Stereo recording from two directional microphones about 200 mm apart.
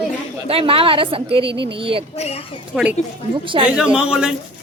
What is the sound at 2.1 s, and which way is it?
Speech, 35° left (ahead or behind).